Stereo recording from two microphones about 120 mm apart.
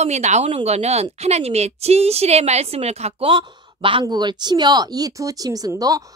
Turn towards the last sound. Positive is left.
turn(degrees=-30)  # may be behind; listen again after turning